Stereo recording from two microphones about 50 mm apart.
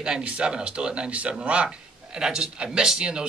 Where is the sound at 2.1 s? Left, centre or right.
Centre.